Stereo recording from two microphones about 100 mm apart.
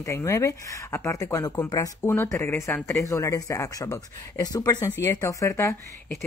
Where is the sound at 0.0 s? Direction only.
30° left (ahead or behind).